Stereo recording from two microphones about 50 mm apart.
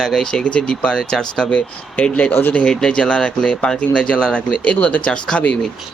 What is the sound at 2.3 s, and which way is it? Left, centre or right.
Speech, left.